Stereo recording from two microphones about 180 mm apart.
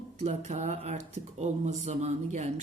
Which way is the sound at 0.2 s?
40° right (ahead or behind).